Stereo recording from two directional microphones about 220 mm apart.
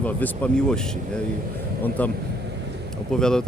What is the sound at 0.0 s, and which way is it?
Speech, 5° left (ahead or behind).